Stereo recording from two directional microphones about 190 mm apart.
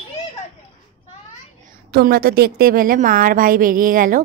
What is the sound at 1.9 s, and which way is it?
A woman's voice, 55° right (ahead or behind).